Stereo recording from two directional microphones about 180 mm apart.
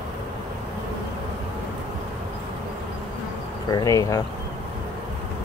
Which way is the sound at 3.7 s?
20° left (ahead or behind).